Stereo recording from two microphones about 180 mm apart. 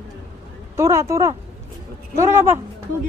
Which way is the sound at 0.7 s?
15° right (ahead or behind).